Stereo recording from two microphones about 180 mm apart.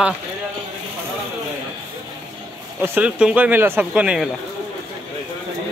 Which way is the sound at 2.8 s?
10° right (ahead or behind).